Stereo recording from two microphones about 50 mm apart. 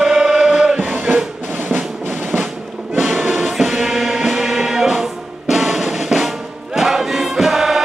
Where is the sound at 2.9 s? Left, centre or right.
Centre.